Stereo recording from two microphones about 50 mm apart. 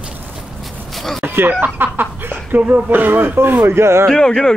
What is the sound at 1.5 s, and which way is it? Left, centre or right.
Speech, right.